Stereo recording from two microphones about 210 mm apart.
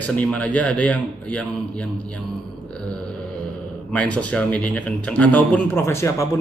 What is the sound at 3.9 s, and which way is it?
A man's voice, 5° left (ahead or behind).